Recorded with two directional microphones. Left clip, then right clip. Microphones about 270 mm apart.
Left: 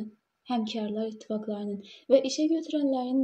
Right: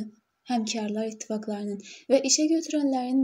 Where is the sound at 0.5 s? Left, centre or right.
Right.